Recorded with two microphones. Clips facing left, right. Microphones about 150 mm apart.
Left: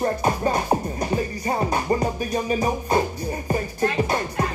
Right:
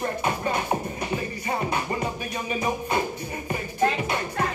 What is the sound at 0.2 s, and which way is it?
Music, 35° left (ahead or behind).